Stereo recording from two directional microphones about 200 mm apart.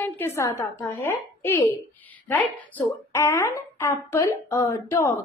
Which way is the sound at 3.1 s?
10° left (ahead or behind).